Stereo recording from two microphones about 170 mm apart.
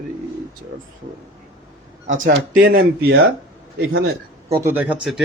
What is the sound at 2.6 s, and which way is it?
Speech, 65° right (ahead or behind).